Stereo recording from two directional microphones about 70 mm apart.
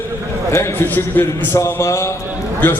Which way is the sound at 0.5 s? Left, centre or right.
Left.